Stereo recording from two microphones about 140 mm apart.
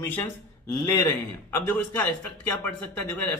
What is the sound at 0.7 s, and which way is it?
Speech, 20° left (ahead or behind).